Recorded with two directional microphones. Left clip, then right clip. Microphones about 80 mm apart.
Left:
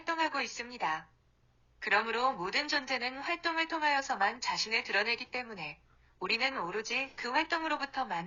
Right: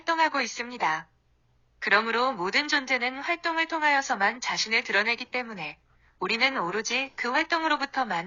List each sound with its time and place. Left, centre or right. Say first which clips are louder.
0.0 s a woman's voice: right 8 dB; right